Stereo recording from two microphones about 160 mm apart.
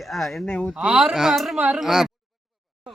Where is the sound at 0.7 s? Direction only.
5° right (ahead or behind).